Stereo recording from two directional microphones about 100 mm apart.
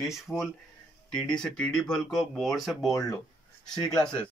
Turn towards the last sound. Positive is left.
turn(degrees=10)  # may be behind; listen again after turning